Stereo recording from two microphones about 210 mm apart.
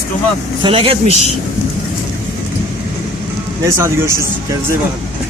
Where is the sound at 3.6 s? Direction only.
10° right (ahead or behind).